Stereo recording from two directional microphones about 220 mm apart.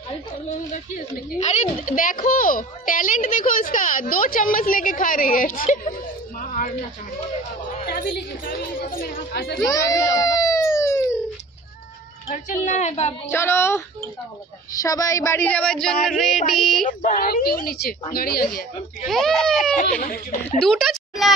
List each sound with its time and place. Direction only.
0.9 s a child's voice: 30° left (ahead or behind)
6.4 s a sound: 35° left (ahead or behind)
7.8 s a woman's voice: 45° left (ahead or behind)
9.3 s a woman's voice: 45° left (ahead or behind)
9.7 s a sound: 15° left (ahead or behind)
12.6 s a child's voice: 30° left (ahead or behind)
13.3 s speech: 10° left (ahead or behind)
17.0 s a woman's voice: 40° left (ahead or behind)
19.0 s speech: centre (ahead or behind)
19.5 s a child's voice: 40° left (ahead or behind)
20.6 s a sound: centre (ahead or behind)